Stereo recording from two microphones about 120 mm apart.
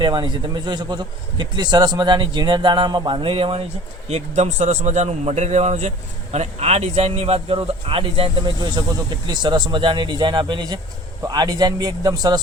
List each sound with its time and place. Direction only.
0.0 s speech: 40° right (ahead or behind)
4.1 s a man's voice: 75° right (ahead or behind); by 12.4 s 35° right (ahead or behind)